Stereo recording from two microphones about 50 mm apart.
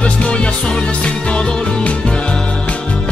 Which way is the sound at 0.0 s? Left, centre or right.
Left.